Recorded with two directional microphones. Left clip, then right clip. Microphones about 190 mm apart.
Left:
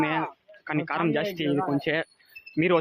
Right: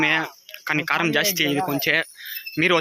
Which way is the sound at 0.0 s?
Centre (ahead or behind).